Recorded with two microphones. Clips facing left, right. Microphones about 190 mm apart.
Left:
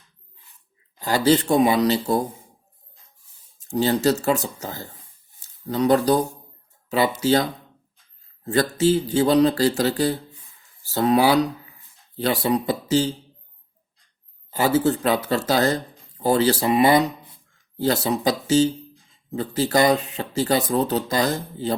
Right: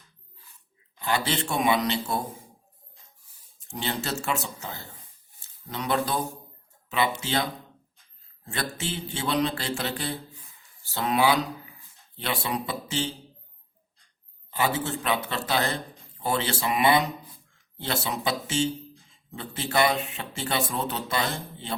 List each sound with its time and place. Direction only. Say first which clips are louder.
0.9 s speech: left 9 dB; 40° left (ahead or behind)
3.6 s speech: left 12 dB; 40° left (ahead or behind)
8.8 s speech: left 14 dB; 40° left (ahead or behind)
14.5 s speech: left 8 dB; 40° left (ahead or behind)